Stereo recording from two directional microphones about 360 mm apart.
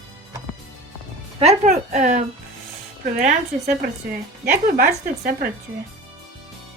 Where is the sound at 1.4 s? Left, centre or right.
Centre.